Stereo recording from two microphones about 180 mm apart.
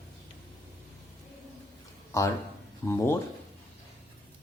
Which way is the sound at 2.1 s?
15° left (ahead or behind).